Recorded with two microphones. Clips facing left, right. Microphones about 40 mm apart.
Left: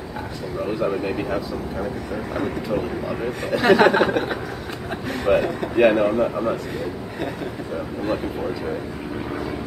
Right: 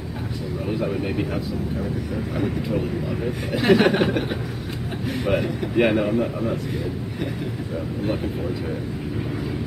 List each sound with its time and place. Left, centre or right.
2.3 s speech: centre
3.5 s speech: centre